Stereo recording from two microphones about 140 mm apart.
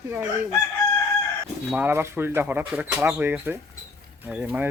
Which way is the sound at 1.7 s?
15° right (ahead or behind).